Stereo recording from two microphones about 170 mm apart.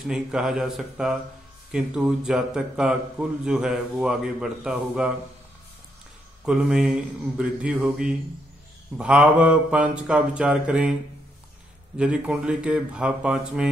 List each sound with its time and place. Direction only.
0.0 s speech: 5° right (ahead or behind)
6.4 s speech: 5° right (ahead or behind)
8.9 s mantra: 5° right (ahead or behind)
12.0 s speech: 5° right (ahead or behind)